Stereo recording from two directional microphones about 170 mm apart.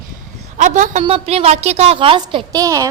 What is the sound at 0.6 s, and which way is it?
A woman's voice, 45° right (ahead or behind).